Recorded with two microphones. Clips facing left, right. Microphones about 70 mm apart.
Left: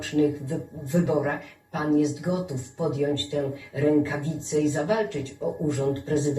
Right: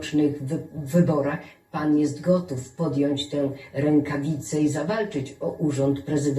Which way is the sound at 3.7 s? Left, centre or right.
Right.